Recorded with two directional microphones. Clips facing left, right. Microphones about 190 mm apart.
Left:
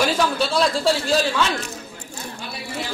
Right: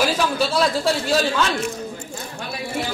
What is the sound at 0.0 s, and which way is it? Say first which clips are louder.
Speech: even; centre (ahead or behind).